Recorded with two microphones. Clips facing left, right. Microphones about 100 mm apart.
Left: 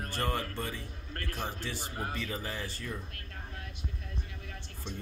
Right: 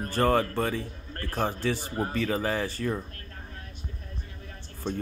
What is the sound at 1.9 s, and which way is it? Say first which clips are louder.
Speech: right 8 dB; 35° right (ahead or behind).